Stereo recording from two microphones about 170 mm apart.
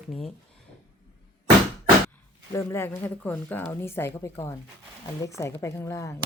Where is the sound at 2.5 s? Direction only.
15° left (ahead or behind).